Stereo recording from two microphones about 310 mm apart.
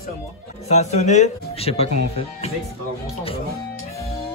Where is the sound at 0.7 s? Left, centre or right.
Left.